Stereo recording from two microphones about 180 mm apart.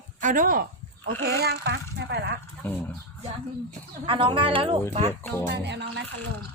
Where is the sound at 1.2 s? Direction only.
65° right (ahead or behind).